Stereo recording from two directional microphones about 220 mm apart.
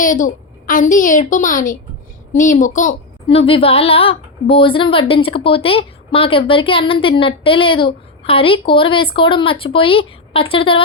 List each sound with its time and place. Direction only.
0.0 s a woman's voice: 35° left (ahead or behind)